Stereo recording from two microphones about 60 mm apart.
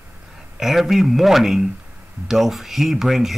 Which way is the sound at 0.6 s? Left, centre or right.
Centre.